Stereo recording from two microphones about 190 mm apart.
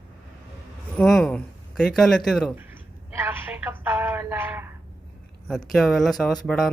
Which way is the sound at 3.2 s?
10° right (ahead or behind).